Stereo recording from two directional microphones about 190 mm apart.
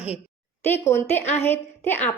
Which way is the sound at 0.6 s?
10° left (ahead or behind).